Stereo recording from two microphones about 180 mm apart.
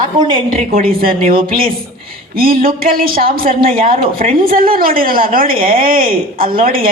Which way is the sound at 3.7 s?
30° right (ahead or behind).